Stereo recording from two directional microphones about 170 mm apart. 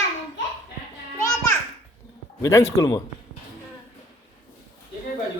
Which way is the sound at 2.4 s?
15° left (ahead or behind).